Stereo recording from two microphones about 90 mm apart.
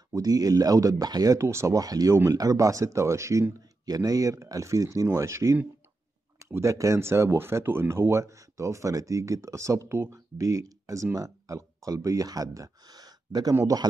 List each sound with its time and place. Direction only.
0.1 s speech: 45° right (ahead or behind)
1.4 s speech: 30° right (ahead or behind)
3.8 s speech: 45° right (ahead or behind)